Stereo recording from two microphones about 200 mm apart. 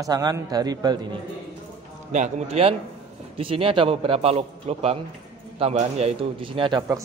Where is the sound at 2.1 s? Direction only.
35° right (ahead or behind).